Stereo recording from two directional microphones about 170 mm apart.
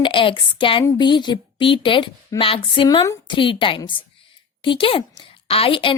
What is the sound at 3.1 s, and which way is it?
A woman's voice, 25° left (ahead or behind).